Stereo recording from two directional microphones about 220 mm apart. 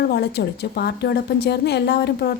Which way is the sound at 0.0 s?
50° left (ahead or behind).